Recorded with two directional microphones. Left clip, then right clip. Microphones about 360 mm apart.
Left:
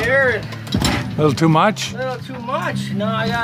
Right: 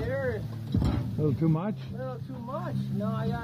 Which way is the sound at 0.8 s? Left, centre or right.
Centre.